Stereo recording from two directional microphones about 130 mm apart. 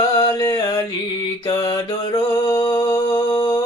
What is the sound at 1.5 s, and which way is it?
Mantra, 30° left (ahead or behind).